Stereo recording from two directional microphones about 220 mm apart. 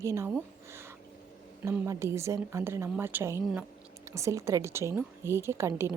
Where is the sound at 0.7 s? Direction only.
10° right (ahead or behind).